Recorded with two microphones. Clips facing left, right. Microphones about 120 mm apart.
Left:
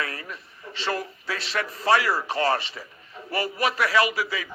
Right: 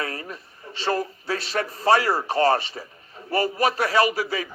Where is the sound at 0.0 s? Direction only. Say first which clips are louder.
Right 2 dB; 35° right (ahead or behind).